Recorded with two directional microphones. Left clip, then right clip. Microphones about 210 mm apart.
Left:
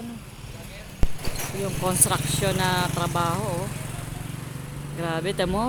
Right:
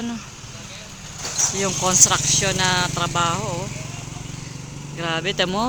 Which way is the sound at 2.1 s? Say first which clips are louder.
Right 5 dB; 10° left (ahead or behind).